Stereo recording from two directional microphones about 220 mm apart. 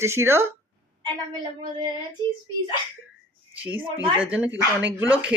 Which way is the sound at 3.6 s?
5° right (ahead or behind).